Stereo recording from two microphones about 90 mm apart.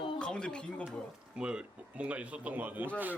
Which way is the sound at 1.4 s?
10° right (ahead or behind).